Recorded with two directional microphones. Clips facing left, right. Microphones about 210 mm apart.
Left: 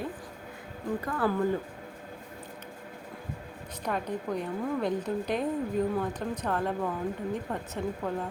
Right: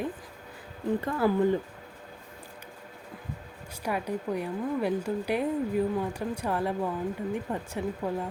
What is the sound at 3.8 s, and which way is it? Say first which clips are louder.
A woman's voice: right 1 dB; 10° right (ahead or behind).